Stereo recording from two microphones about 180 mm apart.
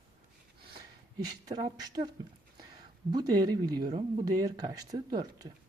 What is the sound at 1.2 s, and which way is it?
Speech, 20° right (ahead or behind).